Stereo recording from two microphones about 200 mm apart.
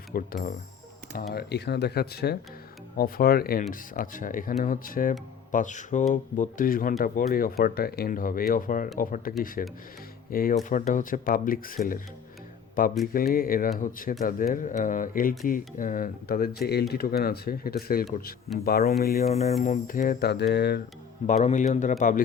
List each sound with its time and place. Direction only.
0.1 s speech: 45° left (ahead or behind)
19.3 s speech: 35° left (ahead or behind); by 20.8 s 55° left (ahead or behind)
21.2 s speech: 35° left (ahead or behind)